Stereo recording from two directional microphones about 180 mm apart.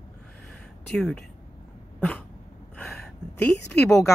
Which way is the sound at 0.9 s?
5° left (ahead or behind).